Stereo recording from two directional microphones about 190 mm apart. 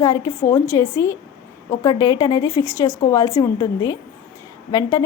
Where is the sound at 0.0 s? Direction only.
20° left (ahead or behind).